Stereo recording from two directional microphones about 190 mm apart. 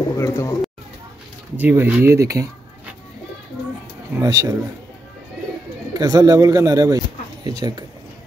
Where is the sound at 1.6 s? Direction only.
10° right (ahead or behind).